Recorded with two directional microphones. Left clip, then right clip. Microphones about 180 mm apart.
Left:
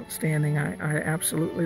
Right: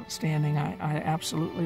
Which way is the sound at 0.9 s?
15° right (ahead or behind).